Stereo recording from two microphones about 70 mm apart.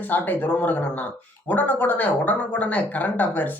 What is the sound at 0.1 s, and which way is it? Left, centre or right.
Speech, left.